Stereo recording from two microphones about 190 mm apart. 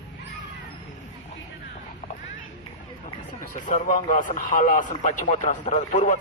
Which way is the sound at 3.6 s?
40° left (ahead or behind).